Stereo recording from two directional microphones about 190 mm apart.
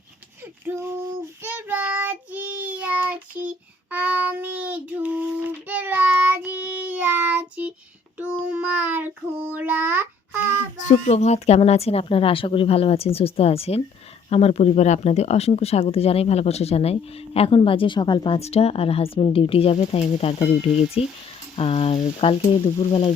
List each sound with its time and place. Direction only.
1.5 s child singing: 10° right (ahead or behind)
10.8 s speech: 35° left (ahead or behind)